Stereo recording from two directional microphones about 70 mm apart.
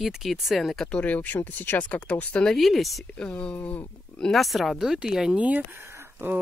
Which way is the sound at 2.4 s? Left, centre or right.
Centre.